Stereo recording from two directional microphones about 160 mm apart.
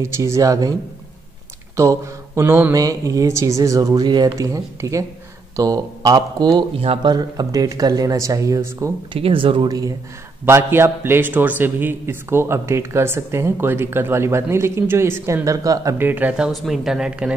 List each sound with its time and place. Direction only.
0.0 s speech: 20° right (ahead or behind)
1.8 s speech: 15° right (ahead or behind)
9.1 s a man's voice: 35° right (ahead or behind); by 17.3 s 5° right (ahead or behind)